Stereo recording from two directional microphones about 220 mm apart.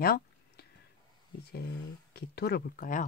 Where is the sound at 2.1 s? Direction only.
45° left (ahead or behind).